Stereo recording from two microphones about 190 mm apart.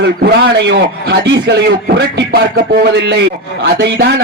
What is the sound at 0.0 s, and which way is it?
A man's voice, 55° right (ahead or behind).